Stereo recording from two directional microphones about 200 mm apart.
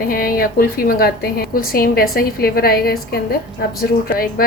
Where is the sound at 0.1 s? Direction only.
45° left (ahead or behind).